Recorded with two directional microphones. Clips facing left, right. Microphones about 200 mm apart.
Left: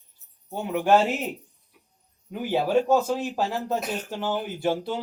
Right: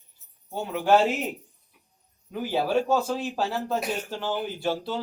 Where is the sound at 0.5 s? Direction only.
15° left (ahead or behind).